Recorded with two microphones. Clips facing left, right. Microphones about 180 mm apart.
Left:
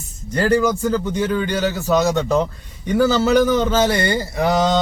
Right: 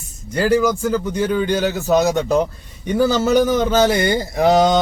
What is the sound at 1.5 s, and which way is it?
Mantra, 15° right (ahead or behind).